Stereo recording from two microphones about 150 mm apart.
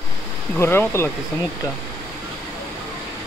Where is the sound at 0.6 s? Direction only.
15° left (ahead or behind).